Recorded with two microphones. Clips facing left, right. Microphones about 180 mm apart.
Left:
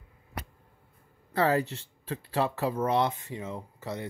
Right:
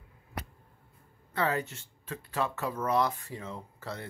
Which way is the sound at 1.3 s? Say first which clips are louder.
Left 5 dB; 35° left (ahead or behind).